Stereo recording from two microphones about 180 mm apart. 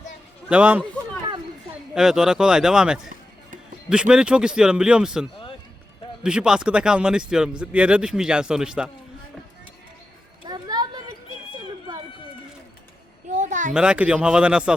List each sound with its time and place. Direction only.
0.4 s a man's voice: 5° right (ahead or behind)
2.0 s speech: 5° right (ahead or behind)
10.4 s children playing: 20° right (ahead or behind)
13.3 s a sound: 45° right (ahead or behind)
13.7 s speech: 5° right (ahead or behind)